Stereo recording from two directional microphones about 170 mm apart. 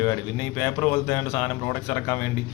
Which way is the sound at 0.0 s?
15° left (ahead or behind).